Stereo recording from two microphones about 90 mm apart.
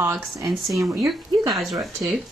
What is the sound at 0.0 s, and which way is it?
Speech, 30° right (ahead or behind).